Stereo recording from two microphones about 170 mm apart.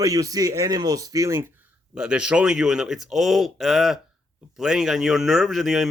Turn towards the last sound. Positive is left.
turn(degrees=0)  # may be behind; listen again after turning